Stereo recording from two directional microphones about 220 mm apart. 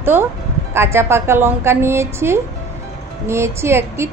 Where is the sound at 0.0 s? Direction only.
10° right (ahead or behind).